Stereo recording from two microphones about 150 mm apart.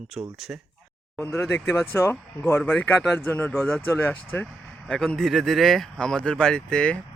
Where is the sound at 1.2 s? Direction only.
15° left (ahead or behind).